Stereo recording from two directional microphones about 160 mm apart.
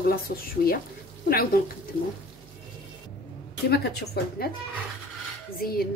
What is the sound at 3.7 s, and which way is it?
Speech, 90° left.